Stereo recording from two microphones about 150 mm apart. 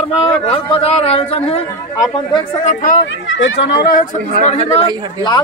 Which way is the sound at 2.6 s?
55° left (ahead or behind).